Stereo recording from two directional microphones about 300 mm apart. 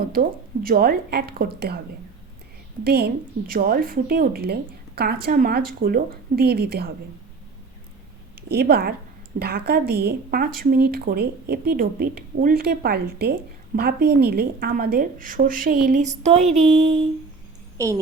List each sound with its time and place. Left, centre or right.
0.1 s speech: right
2.8 s speech: right
8.4 s a woman's voice: right; by 18.0 s centre